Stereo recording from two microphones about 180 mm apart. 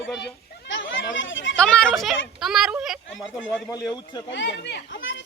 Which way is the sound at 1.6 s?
5° left (ahead or behind).